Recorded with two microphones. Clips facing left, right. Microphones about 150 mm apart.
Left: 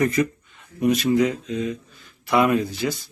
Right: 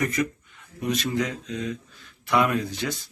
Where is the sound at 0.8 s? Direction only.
10° left (ahead or behind).